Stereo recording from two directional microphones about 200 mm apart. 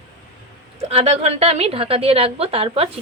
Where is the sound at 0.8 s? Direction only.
30° right (ahead or behind).